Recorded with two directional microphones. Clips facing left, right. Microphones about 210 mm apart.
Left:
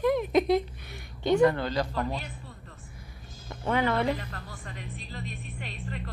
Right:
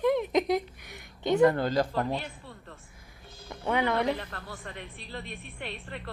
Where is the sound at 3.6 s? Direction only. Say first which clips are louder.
Left 1 dB; 15° right (ahead or behind).